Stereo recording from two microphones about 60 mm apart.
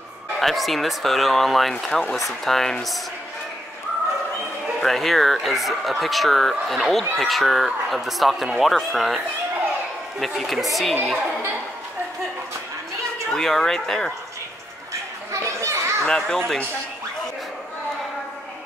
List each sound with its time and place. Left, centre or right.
0.4 s speech: centre
4.7 s speech: centre
10.2 s speech: centre
13.3 s speech: centre
15.3 s children playing: right
16.1 s speech: centre